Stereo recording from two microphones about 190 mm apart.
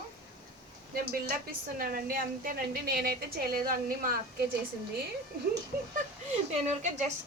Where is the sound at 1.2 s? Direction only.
50° right (ahead or behind).